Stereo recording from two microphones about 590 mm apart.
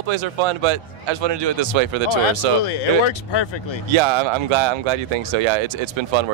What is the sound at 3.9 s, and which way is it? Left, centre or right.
Speech, right.